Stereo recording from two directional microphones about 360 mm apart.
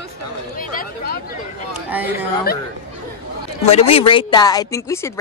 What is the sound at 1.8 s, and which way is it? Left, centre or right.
Speech, centre.